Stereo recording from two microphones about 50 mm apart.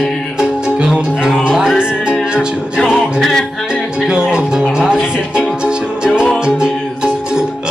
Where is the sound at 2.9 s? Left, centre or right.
Centre.